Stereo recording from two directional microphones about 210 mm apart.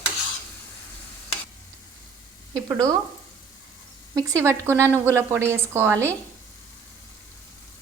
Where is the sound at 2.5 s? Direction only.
15° right (ahead or behind).